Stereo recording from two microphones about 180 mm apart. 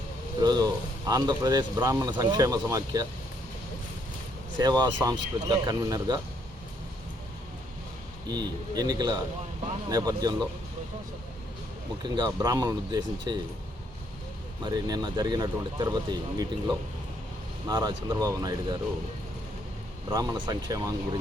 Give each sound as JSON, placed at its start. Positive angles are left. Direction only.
{"t": 0.4, "sound": "speech", "side_deg": -20}
{"t": 4.5, "sound": "speech", "side_deg": -25}
{"t": 8.3, "sound": "speech", "side_deg": -20}
{"t": 12.0, "sound": "speech", "side_deg": -20}
{"t": 14.6, "sound": "speech", "side_deg": -20}
{"t": 20.1, "sound": "speech", "side_deg": -25}